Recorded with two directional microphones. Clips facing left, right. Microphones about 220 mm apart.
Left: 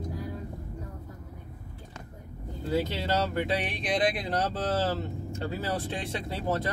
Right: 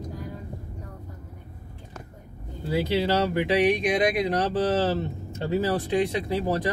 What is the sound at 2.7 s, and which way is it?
Speech, 15° right (ahead or behind).